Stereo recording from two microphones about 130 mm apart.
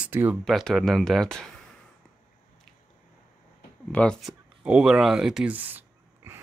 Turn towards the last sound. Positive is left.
turn(degrees=-15)  # may be behind; listen again after turning